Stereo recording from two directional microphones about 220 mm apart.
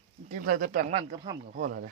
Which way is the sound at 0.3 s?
40° right (ahead or behind).